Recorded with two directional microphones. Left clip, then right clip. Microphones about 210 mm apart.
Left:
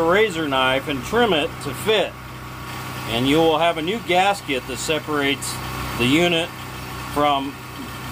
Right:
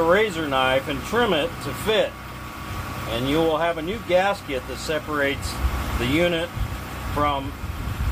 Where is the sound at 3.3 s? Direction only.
50° left (ahead or behind).